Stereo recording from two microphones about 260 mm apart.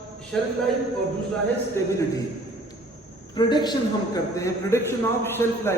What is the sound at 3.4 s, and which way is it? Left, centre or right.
A man's voice, centre.